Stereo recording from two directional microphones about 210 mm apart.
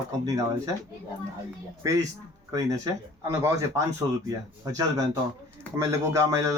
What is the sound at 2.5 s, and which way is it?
A man's voice, 15° right (ahead or behind).